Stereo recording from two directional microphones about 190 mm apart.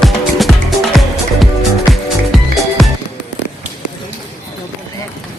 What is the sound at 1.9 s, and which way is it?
Music, centre (ahead or behind).